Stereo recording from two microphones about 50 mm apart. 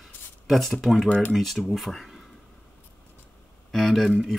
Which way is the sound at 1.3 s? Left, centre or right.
Centre.